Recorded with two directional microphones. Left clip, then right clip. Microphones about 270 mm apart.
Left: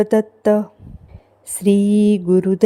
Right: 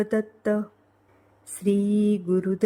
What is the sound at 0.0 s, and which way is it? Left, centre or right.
Mantra, centre.